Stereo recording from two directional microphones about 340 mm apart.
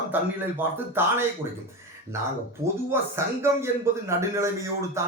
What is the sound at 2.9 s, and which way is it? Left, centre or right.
Speech, centre.